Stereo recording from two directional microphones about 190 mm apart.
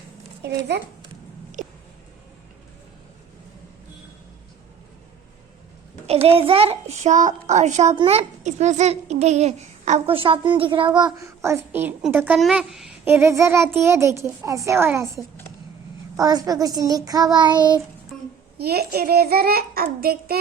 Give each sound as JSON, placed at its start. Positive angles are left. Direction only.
{"t": 0.4, "sound": "a child's voice", "side_deg": -60}
{"t": 1.6, "sound": "music", "side_deg": -40}
{"t": 6.2, "sound": "a child's voice", "side_deg": -30}
{"t": 13.1, "sound": "a child's voice", "side_deg": -15}
{"t": 18.1, "sound": "a sound", "side_deg": 0}
{"t": 18.5, "sound": "a child's voice", "side_deg": -55}